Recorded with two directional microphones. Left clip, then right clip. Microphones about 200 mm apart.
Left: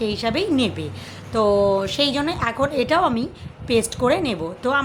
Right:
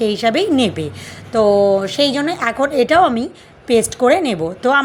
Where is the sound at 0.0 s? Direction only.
25° right (ahead or behind).